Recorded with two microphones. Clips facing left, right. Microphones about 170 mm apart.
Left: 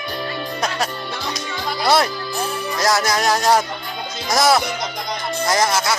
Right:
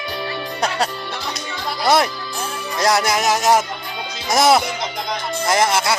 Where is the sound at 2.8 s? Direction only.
25° right (ahead or behind).